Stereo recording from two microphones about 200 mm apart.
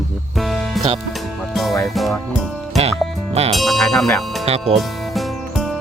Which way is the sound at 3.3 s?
30° right (ahead or behind).